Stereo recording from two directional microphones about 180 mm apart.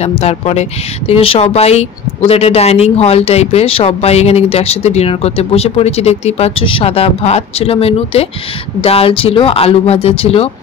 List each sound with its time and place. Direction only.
0.0 s speech: 35° left (ahead or behind)